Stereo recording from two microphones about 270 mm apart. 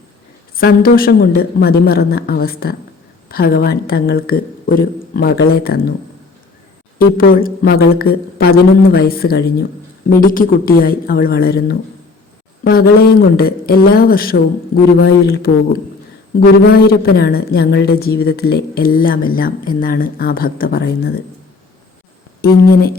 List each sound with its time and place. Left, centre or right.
0.5 s a woman's voice: left
7.2 s a woman's voice: left
22.4 s a woman's voice: left